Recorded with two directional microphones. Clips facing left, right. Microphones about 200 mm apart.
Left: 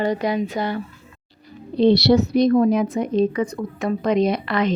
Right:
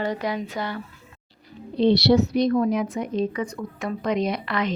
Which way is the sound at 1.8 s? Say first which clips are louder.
Left 3 dB; 40° left (ahead or behind).